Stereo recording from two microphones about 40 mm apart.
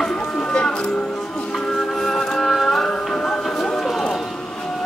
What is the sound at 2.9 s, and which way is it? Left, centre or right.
Music, centre.